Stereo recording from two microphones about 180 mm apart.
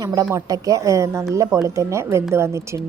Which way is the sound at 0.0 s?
20° right (ahead or behind).